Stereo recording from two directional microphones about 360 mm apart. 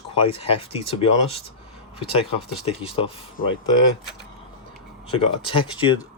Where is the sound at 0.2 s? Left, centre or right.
Centre.